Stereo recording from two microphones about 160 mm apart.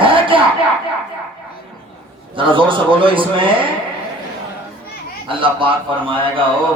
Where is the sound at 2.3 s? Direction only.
30° right (ahead or behind).